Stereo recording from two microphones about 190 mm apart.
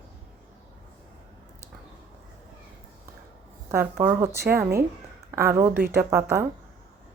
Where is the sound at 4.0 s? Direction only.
15° right (ahead or behind).